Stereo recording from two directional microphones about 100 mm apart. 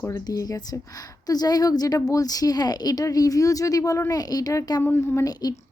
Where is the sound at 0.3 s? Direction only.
40° left (ahead or behind).